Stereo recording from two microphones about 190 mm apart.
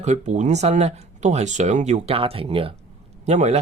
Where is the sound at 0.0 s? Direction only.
35° right (ahead or behind).